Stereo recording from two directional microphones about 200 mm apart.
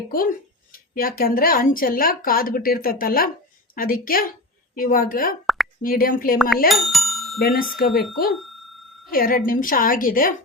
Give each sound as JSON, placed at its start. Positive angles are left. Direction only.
{"t": 0.1, "sound": "speech", "side_deg": 45}
{"t": 6.7, "sound": "bicycle bell", "side_deg": 0}
{"t": 7.4, "sound": "speech", "side_deg": 45}
{"t": 9.1, "sound": "speech", "side_deg": 45}